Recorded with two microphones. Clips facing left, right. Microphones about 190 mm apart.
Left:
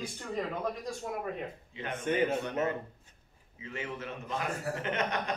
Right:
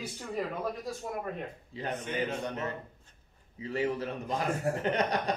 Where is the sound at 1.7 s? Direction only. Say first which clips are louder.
Right 4 dB; 35° right (ahead or behind).